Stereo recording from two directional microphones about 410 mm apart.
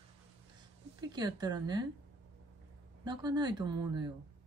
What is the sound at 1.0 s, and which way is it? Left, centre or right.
Speech, centre.